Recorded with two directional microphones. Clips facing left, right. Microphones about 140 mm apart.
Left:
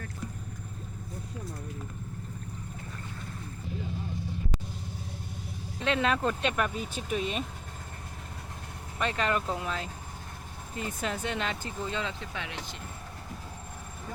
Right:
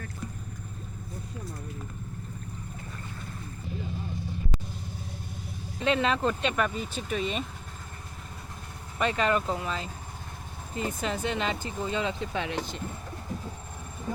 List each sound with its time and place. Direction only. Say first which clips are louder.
5.8 s speech: right 2 dB; centre (ahead or behind)
9.0 s speech: right 3 dB; centre (ahead or behind)
11.8 s speech: right 4 dB; 10° right (ahead or behind)
12.3 s speech: right 7 dB; 30° right (ahead or behind)